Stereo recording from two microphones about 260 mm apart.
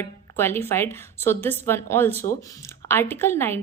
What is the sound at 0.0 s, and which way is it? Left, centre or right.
A woman's voice, centre.